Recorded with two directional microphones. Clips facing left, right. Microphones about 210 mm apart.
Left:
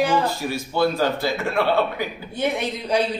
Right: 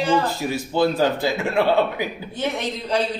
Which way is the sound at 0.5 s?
15° right (ahead or behind).